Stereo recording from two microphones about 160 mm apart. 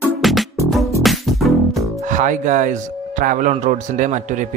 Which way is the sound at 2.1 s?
50° right (ahead or behind).